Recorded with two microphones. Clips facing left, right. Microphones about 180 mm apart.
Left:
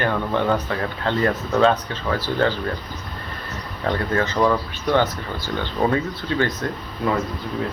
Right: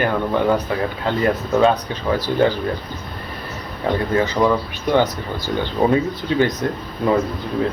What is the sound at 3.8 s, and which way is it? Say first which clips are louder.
Speech: right 3 dB; 15° right (ahead or behind).